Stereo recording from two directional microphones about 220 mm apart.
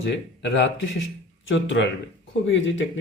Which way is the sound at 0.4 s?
55° left (ahead or behind).